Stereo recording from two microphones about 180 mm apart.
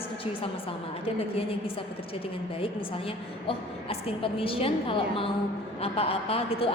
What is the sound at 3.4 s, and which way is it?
A woman's voice, 30° left (ahead or behind).